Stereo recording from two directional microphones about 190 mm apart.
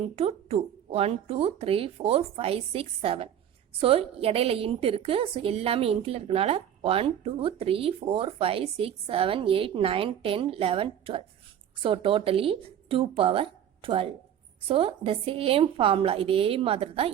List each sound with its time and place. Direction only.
0.2 s a woman's voice: 30° right (ahead or behind)